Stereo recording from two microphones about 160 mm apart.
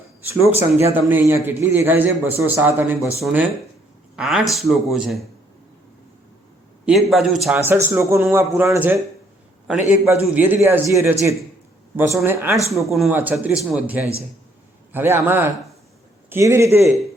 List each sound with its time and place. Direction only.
0.4 s a man's voice: 15° right (ahead or behind)
3.2 s a man's voice: centre (ahead or behind)
6.8 s a man's voice: centre (ahead or behind)
7.6 s a man's voice: 15° right (ahead or behind)
12.9 s a man's voice: centre (ahead or behind)
13.1 s a man's voice: 10° right (ahead or behind)